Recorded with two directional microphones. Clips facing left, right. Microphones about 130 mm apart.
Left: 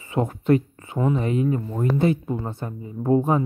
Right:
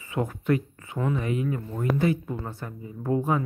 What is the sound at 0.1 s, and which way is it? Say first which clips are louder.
Speech: left 5 dB; 25° left (ahead or behind).